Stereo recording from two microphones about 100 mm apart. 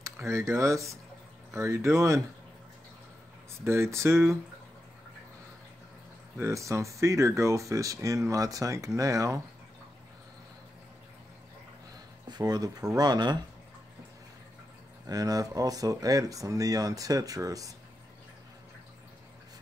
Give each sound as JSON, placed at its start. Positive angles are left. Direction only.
{"t": 0.0, "sound": "speech", "side_deg": -30}
{"t": 3.6, "sound": "speech", "side_deg": -25}
{"t": 6.3, "sound": "speech", "side_deg": -30}
{"t": 12.3, "sound": "speech", "side_deg": -40}
{"t": 15.0, "sound": "speech", "side_deg": -40}